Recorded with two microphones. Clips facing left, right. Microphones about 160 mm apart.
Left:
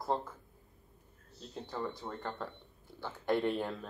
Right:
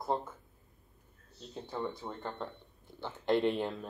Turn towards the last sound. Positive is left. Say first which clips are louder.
# right 1 dB
turn(degrees=0)  # may be behind; listen again after turning